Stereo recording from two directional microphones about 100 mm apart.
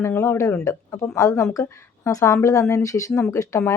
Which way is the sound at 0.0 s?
25° left (ahead or behind).